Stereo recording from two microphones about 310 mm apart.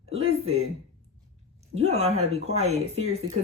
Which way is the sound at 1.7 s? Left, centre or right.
Centre.